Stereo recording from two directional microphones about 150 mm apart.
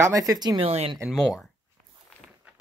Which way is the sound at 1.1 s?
5° left (ahead or behind).